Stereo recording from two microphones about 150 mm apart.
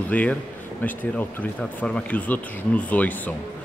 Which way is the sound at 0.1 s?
10° left (ahead or behind).